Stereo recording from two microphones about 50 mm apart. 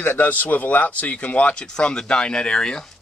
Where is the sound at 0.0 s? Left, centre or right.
Left.